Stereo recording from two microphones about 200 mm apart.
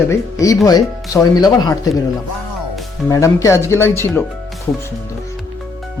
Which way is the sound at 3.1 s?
15° left (ahead or behind).